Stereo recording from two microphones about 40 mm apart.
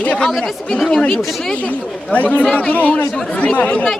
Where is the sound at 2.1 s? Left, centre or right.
Left.